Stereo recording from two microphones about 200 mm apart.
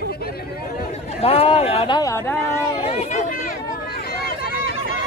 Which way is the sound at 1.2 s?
30° left (ahead or behind).